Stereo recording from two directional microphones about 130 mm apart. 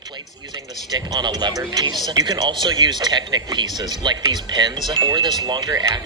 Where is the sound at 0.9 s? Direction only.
30° right (ahead or behind).